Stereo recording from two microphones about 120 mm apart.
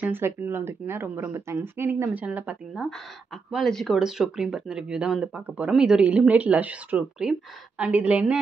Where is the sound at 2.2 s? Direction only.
10° right (ahead or behind).